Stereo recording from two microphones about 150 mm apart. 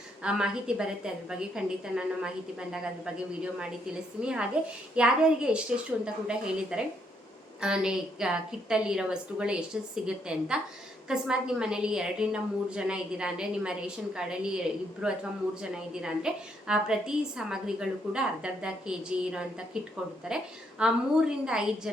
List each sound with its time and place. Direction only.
0.2 s a woman's voice: 5° right (ahead or behind)